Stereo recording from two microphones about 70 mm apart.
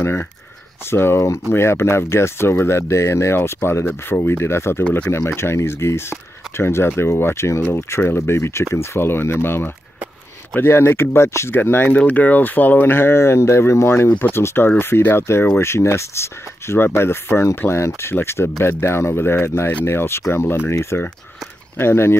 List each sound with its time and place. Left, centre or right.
0.0 s speech: left